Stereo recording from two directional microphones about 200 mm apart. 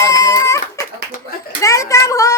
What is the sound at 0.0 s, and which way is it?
Baby cry, 15° left (ahead or behind).